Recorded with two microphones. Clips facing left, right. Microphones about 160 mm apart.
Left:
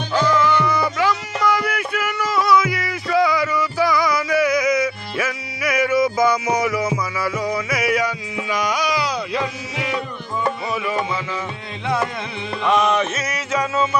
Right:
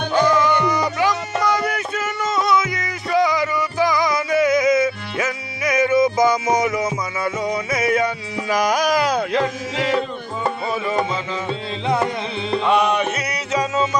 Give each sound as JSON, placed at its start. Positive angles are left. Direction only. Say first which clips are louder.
{"t": 0.1, "sound": "music", "louder": "right 1 dB", "side_deg": -15}
{"t": 8.4, "sound": "carnatic music", "louder": "right 4 dB", "side_deg": -40}
{"t": 10.7, "sound": "music", "louder": "right 1 dB", "side_deg": -25}
{"t": 12.7, "sound": "music", "louder": "left 2 dB", "side_deg": -15}